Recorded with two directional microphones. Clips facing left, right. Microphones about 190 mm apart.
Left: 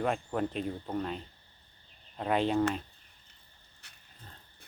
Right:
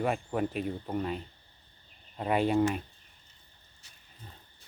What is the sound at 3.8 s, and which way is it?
Wild animals, 65° left (ahead or behind).